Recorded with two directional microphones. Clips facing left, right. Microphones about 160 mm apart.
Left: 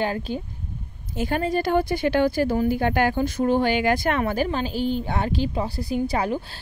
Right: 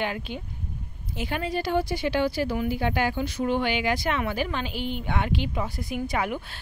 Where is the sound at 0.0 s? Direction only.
35° left (ahead or behind).